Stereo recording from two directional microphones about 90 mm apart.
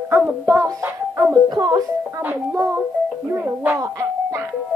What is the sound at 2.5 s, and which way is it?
A child's voice, 30° right (ahead or behind).